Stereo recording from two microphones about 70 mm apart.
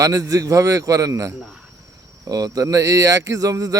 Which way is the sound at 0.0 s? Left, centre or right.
Right.